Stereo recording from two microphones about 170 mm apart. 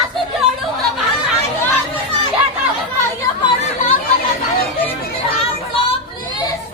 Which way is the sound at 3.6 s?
40° left (ahead or behind).